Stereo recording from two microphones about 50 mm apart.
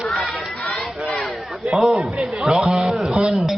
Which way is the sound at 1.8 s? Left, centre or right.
Centre.